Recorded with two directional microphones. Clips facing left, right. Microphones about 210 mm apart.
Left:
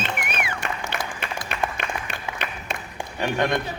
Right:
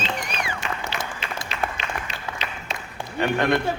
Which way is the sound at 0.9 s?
55° left (ahead or behind).